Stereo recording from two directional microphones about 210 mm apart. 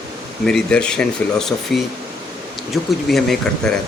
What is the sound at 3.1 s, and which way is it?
Speech, centre (ahead or behind).